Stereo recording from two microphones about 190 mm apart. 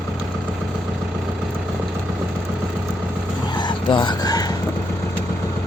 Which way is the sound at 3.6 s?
25° left (ahead or behind).